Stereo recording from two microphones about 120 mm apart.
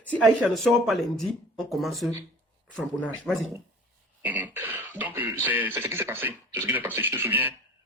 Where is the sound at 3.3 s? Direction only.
5° left (ahead or behind).